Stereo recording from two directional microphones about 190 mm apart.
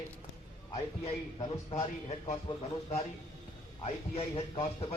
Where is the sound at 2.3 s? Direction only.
35° left (ahead or behind).